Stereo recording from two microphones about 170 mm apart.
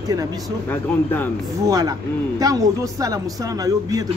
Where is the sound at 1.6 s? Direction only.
20° right (ahead or behind).